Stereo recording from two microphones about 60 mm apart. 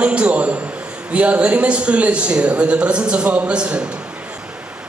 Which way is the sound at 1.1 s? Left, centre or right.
Right.